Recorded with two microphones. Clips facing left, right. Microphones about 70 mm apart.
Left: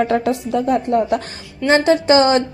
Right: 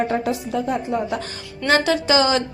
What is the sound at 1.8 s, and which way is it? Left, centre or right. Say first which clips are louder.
Speech: left 5 dB; left.